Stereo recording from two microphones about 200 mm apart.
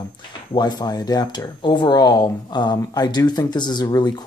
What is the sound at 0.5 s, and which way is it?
Speech, 20° left (ahead or behind).